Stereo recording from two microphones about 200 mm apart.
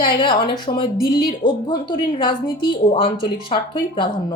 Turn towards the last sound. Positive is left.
turn(degrees=25)  # may be behind; listen again after turning